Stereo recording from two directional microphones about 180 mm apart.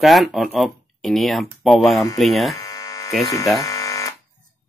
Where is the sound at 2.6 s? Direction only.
15° left (ahead or behind).